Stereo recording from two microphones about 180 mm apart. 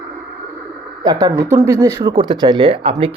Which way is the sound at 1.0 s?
20° right (ahead or behind).